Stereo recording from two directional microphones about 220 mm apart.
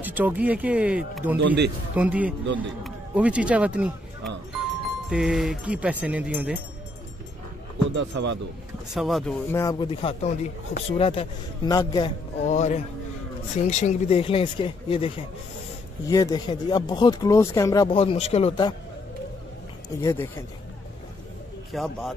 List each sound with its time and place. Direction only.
0.0 s speech: 10° right (ahead or behind)
1.4 s a man's voice: 50° right (ahead or behind)
2.0 s speech: 5° right (ahead or behind)
7.9 s speech: 55° right (ahead or behind)
8.9 s speech: centre (ahead or behind)
9.5 s speech: 15° left (ahead or behind)
12.4 s music: 30° left (ahead or behind)
13.7 s speech: 30° left (ahead or behind)
20.0 s speech: 15° left (ahead or behind)
21.7 s speech: centre (ahead or behind)